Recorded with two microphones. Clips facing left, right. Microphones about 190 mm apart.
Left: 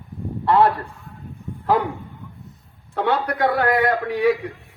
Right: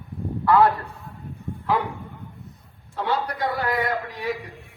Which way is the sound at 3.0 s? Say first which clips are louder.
Left 5 dB; 60° left (ahead or behind).